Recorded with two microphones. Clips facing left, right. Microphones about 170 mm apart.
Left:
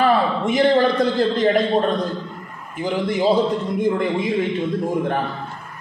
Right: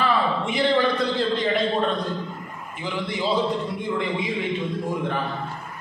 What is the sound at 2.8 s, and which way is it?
A man's voice, 45° left (ahead or behind).